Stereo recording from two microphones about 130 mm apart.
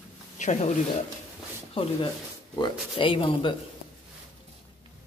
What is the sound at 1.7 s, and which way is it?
Speech, 45° left (ahead or behind).